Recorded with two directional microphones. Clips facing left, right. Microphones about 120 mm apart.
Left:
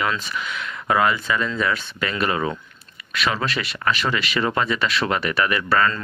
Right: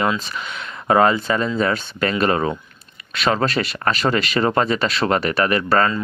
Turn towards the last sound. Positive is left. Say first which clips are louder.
# right 3 dB
turn(degrees=-40)  # may be behind; listen again after turning